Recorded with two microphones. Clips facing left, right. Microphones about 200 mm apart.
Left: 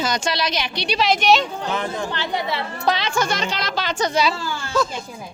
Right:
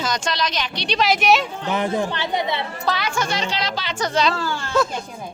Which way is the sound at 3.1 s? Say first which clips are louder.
Left 1 dB; 45° left (ahead or behind).